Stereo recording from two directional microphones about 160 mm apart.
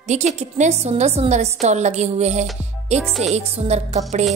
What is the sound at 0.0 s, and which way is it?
A woman's voice, 45° right (ahead or behind).